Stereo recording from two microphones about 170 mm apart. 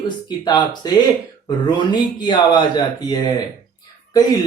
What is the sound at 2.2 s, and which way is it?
Speech, 25° left (ahead or behind).